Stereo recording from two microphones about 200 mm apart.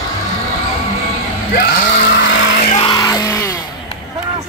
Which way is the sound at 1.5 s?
45° left (ahead or behind).